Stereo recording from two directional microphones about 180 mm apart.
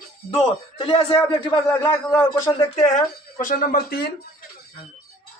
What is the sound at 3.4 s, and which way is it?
Speech, 50° left (ahead or behind).